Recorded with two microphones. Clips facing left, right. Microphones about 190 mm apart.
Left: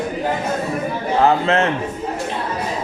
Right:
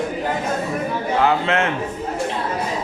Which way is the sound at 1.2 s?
35° left (ahead or behind).